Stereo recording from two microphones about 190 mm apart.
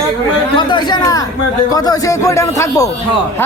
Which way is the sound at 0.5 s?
25° left (ahead or behind).